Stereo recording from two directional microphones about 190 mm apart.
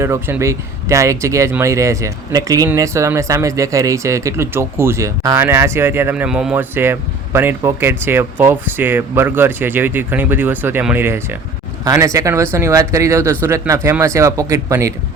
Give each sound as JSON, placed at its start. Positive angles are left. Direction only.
{"t": 0.0, "sound": "speech", "side_deg": -15}